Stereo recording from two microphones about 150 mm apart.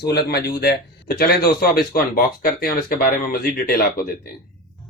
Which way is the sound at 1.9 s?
75° left (ahead or behind).